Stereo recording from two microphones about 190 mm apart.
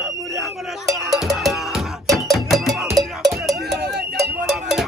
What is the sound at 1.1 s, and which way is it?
Music, centre (ahead or behind).